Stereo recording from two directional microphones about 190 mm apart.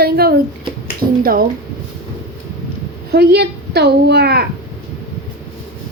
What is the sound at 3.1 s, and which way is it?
Speech, 60° right (ahead or behind).